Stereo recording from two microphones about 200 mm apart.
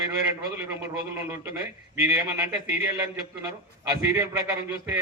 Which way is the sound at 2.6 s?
10° right (ahead or behind).